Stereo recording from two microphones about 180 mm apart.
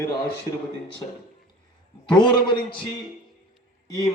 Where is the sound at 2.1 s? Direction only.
25° left (ahead or behind).